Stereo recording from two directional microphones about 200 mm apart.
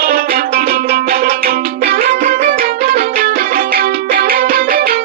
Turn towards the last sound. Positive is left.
turn(degrees=-50)  # may be behind; listen again after turning